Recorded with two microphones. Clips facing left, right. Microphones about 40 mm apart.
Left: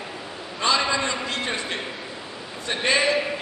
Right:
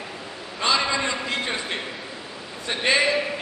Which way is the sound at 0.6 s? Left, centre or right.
Centre.